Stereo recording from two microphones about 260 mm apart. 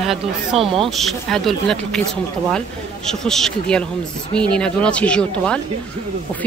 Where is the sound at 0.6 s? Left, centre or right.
Right.